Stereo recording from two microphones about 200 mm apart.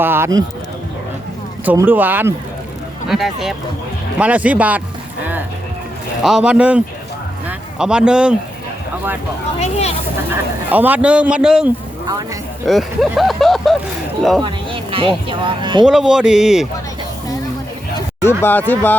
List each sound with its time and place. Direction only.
0.0 s speech: 10° right (ahead or behind)
1.6 s speech: 10° right (ahead or behind)
5.2 s music: 10° right (ahead or behind)
6.2 s speech: 5° right (ahead or behind)
9.6 s speech: 35° left (ahead or behind)
10.7 s speech: 10° right (ahead or behind)
12.0 s speech: 20° right (ahead or behind)
12.6 s speech: centre (ahead or behind)
14.4 s speech: 25° right (ahead or behind)
15.8 s speech: 5° right (ahead or behind)
18.2 s speech: 10° left (ahead or behind)